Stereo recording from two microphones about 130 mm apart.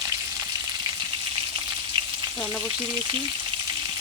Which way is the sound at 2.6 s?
35° right (ahead or behind).